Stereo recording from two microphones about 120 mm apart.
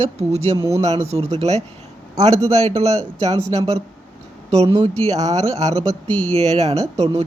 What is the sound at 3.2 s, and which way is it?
Speech, 60° right (ahead or behind).